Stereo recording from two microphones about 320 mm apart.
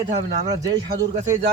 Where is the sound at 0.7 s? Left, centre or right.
Right.